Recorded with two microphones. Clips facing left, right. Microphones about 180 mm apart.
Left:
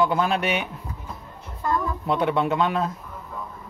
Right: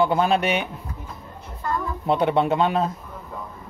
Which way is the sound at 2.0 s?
25° right (ahead or behind).